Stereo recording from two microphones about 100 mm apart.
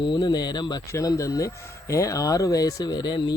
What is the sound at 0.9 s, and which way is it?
Speech, 35° left (ahead or behind).